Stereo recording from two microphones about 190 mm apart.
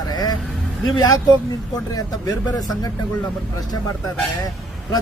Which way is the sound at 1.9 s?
20° left (ahead or behind).